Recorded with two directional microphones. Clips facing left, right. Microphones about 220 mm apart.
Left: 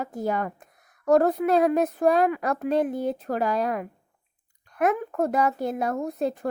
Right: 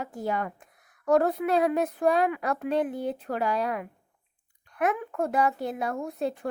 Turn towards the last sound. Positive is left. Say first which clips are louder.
# left 3 dB
turn(degrees=40)  # may be behind; listen again after turning